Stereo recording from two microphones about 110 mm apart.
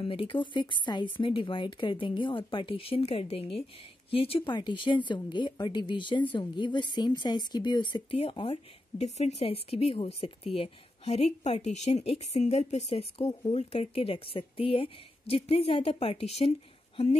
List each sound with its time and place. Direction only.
0.0 s a woman's voice: 55° left (ahead or behind)
4.6 s speech: 45° left (ahead or behind)
8.2 s speech: 55° left (ahead or behind); by 13.3 s 85° left
13.5 s a woman's voice: 75° left (ahead or behind)